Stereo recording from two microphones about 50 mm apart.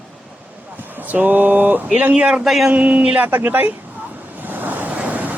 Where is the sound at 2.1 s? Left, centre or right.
Right.